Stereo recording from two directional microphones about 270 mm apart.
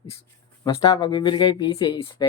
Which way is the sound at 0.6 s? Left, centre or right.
Centre.